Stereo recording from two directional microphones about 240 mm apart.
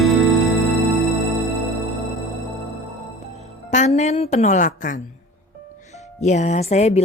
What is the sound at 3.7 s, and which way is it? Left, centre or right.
A woman's voice, left.